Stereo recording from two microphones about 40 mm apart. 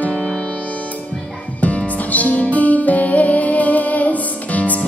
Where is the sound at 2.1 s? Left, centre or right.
Left.